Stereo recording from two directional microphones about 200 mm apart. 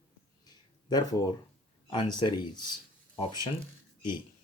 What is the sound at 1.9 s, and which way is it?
Speech, 20° left (ahead or behind).